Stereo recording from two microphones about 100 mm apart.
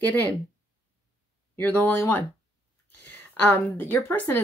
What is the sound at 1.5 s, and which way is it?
Speech, 20° left (ahead or behind).